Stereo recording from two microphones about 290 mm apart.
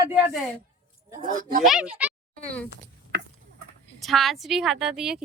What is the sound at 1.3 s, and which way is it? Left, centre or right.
Speech, right.